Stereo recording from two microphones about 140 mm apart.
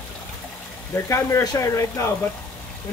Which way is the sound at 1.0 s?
20° left (ahead or behind).